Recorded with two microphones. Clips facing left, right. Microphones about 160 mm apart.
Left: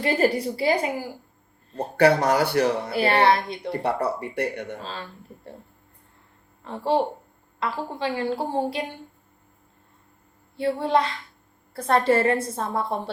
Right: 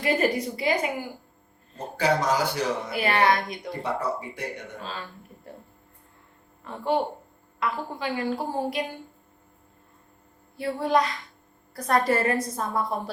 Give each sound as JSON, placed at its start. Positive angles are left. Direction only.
{"t": 0.0, "sound": "a woman's voice", "side_deg": 30}
{"t": 1.7, "sound": "speech", "side_deg": 65}
{"t": 2.9, "sound": "a woman's voice", "side_deg": 30}
{"t": 3.7, "sound": "speech", "side_deg": 65}
{"t": 4.8, "sound": "a woman's voice", "side_deg": 30}
{"t": 6.7, "sound": "a woman's voice", "side_deg": 30}
{"t": 10.6, "sound": "a woman's voice", "side_deg": 30}